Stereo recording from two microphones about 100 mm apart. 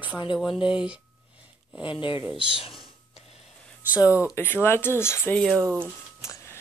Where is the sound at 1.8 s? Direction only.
55° left (ahead or behind).